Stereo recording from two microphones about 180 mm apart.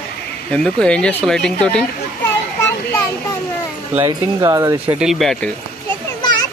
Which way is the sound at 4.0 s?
20° right (ahead or behind).